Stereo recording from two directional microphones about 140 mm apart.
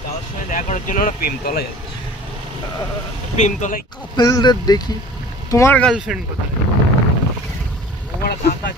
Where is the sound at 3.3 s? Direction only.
60° left (ahead or behind).